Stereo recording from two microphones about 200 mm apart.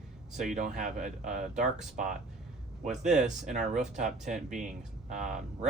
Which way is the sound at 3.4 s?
35° right (ahead or behind).